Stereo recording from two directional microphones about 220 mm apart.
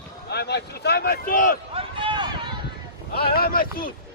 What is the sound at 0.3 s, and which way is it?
Speech, 50° left (ahead or behind).